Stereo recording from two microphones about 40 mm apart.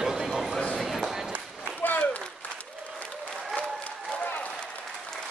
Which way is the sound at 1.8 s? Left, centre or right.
Left.